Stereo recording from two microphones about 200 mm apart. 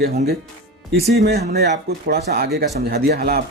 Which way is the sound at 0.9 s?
55° right (ahead or behind).